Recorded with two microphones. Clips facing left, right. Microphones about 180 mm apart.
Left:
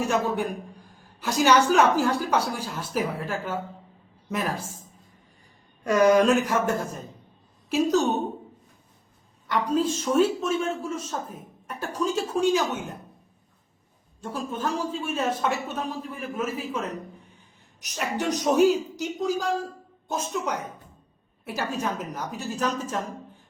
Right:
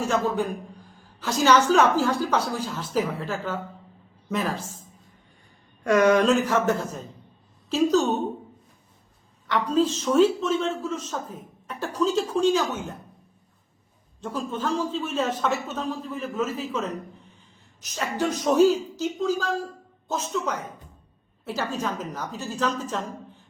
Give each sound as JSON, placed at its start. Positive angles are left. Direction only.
{"t": 0.0, "sound": "a man's voice", "side_deg": 15}
{"t": 6.1, "sound": "a man's voice", "side_deg": 10}
{"t": 9.5, "sound": "a man's voice", "side_deg": 10}
{"t": 14.2, "sound": "a man's voice", "side_deg": 10}
{"t": 17.7, "sound": "a man's voice", "side_deg": 15}